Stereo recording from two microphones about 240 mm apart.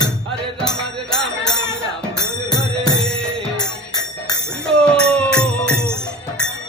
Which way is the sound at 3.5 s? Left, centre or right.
Centre.